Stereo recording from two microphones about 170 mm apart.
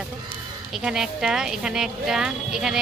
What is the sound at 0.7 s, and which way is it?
A woman's voice, 5° right (ahead or behind).